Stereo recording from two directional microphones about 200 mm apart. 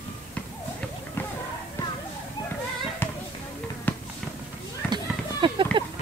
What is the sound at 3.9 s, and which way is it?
Fireworks, 10° left (ahead or behind).